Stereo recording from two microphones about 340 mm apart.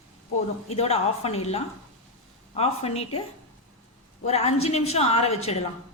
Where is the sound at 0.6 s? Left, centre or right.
Centre.